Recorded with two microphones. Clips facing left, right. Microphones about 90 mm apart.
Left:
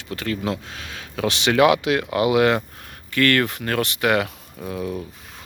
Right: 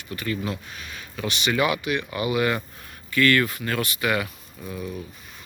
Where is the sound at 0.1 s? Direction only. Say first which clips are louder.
Left 3 dB; 80° left.